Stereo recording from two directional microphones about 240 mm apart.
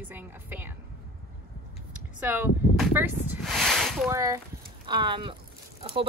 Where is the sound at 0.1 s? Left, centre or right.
Centre.